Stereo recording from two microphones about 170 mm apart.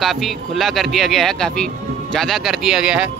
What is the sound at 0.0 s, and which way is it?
Speech, centre (ahead or behind).